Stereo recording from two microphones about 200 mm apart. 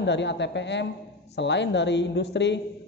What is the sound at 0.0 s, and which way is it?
A man's voice, 60° left (ahead or behind).